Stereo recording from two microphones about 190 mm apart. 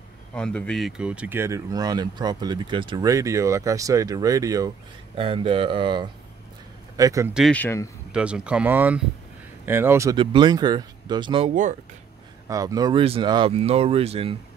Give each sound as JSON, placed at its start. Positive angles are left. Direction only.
{"t": 0.3, "sound": "speech", "side_deg": 5}
{"t": 5.1, "sound": "speech", "side_deg": -30}
{"t": 7.3, "sound": "speech", "side_deg": 5}
{"t": 8.1, "sound": "speech", "side_deg": -5}
{"t": 10.1, "sound": "speech", "side_deg": -25}